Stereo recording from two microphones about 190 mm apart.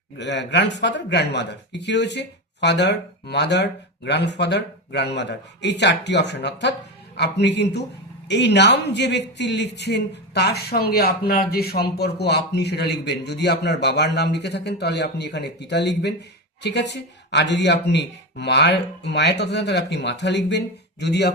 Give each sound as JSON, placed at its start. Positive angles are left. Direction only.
{"t": 0.2, "sound": "speech", "side_deg": 65}